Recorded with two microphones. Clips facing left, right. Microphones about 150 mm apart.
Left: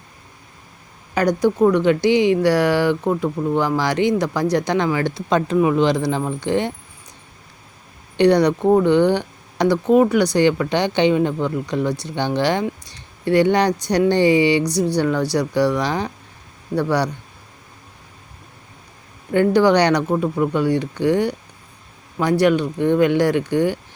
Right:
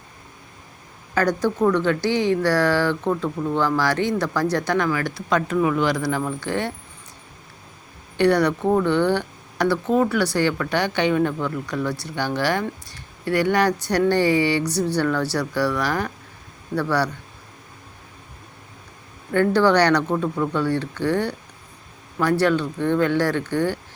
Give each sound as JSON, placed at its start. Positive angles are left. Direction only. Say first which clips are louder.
{"t": 1.1, "sound": "speech", "louder": "left 3 dB", "side_deg": 15}
{"t": 8.1, "sound": "speech", "louder": "left 4 dB", "side_deg": 20}
{"t": 19.3, "sound": "speech", "louder": "left 3 dB", "side_deg": 15}